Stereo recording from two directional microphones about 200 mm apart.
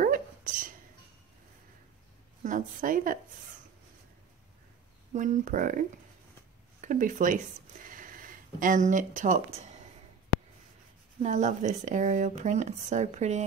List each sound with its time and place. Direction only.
0.0 s a sound: 45° right (ahead or behind)
2.4 s speech: 40° right (ahead or behind)
5.1 s speech: 40° right (ahead or behind)
11.2 s speech: 40° right (ahead or behind)